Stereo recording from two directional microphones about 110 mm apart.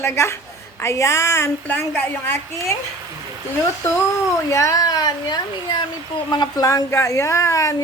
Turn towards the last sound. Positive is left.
turn(degrees=30)  # may be behind; listen again after turning